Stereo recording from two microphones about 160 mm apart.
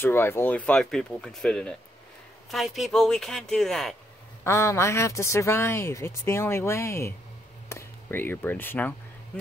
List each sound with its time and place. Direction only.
0.0 s speech: 15° left (ahead or behind)
4.5 s speech: 20° left (ahead or behind)